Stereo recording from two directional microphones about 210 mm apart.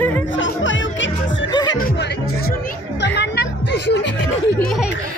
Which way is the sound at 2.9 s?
55° left (ahead or behind).